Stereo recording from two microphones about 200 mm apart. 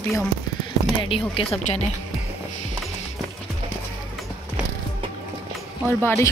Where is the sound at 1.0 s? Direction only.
25° left (ahead or behind).